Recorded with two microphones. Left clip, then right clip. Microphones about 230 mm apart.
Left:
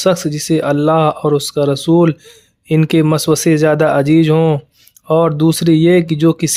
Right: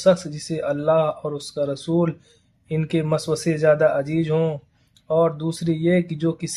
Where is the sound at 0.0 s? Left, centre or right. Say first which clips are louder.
Left 4 dB; left.